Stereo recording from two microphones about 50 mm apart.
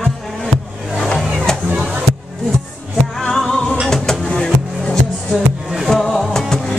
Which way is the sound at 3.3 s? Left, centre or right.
Centre.